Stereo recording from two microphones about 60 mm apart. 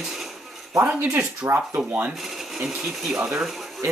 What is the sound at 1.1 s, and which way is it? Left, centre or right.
Speech, right.